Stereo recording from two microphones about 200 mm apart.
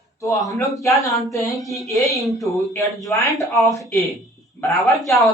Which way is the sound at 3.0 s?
15° left (ahead or behind).